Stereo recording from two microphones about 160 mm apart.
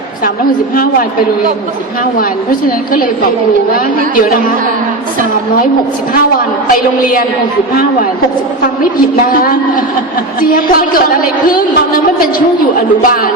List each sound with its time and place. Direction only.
3.8 s a woman's voice: 65° left (ahead or behind)
9.3 s a woman's voice: 65° left (ahead or behind)